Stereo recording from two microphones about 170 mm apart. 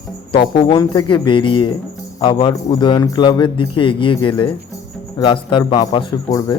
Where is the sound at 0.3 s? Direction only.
25° left (ahead or behind).